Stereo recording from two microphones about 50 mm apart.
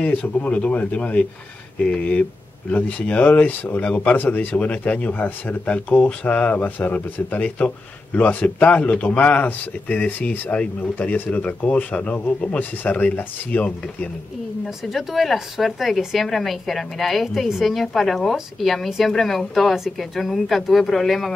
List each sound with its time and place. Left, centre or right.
0.0 s speech: left
4.6 s speech: left
10.5 s speech: left
11.0 s speech: left
14.9 s a woman's voice: centre